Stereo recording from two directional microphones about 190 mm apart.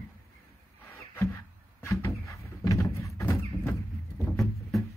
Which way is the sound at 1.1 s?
10° left (ahead or behind).